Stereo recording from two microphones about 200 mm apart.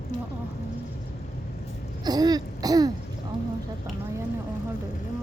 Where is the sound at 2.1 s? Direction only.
20° right (ahead or behind).